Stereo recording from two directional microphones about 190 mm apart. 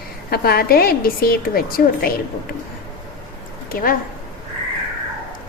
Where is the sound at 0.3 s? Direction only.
55° left (ahead or behind).